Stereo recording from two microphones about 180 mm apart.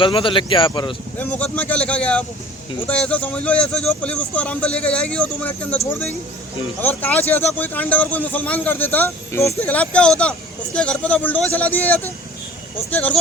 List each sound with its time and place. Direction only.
0.0 s speech: 30° left (ahead or behind)
1.2 s speech: 10° left (ahead or behind)
6.8 s speech: 10° left (ahead or behind)